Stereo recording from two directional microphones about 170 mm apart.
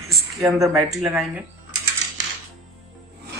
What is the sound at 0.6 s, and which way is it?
Speech, centre (ahead or behind).